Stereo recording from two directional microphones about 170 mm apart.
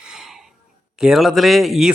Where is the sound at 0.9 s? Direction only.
5° right (ahead or behind).